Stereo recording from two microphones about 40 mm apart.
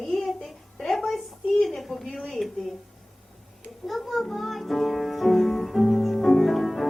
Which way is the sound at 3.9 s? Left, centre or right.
Centre.